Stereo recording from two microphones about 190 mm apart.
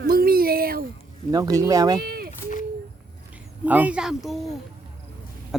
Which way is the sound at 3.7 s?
10° right (ahead or behind).